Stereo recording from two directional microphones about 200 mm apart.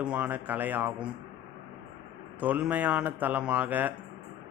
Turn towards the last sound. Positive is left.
turn(degrees=-10)  # may be behind; listen again after turning